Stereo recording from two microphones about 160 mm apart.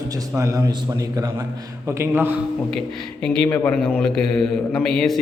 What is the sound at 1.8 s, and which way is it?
Speech, 15° right (ahead or behind).